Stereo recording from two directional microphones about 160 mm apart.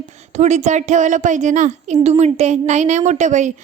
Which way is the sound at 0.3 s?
45° right (ahead or behind).